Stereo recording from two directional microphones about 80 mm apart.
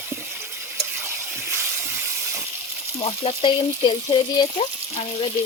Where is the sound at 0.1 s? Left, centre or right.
Right.